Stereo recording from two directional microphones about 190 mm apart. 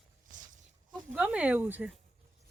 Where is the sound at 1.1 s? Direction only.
5° right (ahead or behind).